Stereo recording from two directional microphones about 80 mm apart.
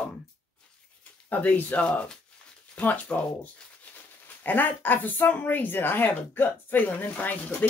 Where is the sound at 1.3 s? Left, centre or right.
Centre.